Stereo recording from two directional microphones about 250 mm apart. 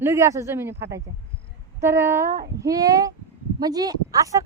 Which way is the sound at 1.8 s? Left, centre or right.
Centre.